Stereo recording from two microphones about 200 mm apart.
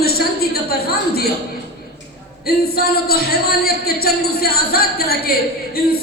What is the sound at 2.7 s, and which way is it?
Speech, 50° left (ahead or behind).